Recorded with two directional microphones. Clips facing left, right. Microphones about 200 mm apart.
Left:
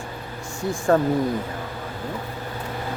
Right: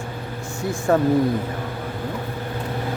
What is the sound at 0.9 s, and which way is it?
Speech, 10° right (ahead or behind).